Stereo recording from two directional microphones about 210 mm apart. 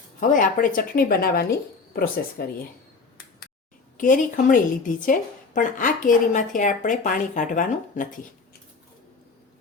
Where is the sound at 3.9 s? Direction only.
40° left (ahead or behind).